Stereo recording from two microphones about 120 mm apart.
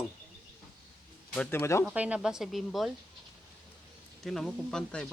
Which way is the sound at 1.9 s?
10° right (ahead or behind).